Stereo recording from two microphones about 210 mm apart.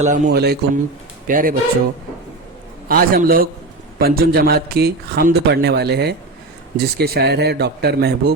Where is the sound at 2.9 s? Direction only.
45° right (ahead or behind).